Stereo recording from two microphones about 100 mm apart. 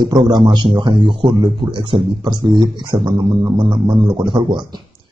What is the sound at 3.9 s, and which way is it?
Speech, 30° right (ahead or behind).